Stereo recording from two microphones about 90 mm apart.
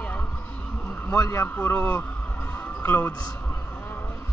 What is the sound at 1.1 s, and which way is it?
Speech, 35° left (ahead or behind).